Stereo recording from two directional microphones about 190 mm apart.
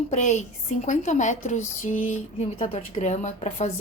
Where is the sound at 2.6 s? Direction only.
30° left (ahead or behind).